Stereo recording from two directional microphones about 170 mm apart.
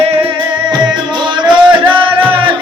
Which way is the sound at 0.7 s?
25° right (ahead or behind).